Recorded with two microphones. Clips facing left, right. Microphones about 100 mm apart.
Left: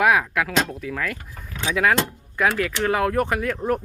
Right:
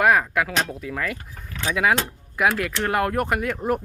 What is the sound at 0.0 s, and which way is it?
Speech, centre (ahead or behind).